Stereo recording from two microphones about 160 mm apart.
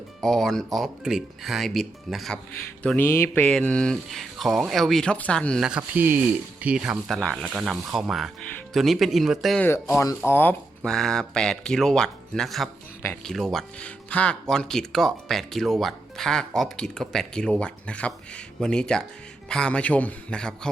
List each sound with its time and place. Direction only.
0.2 s speech: centre (ahead or behind)
5.6 s speech: 10° right (ahead or behind)
9.6 s a man's voice: 15° left (ahead or behind)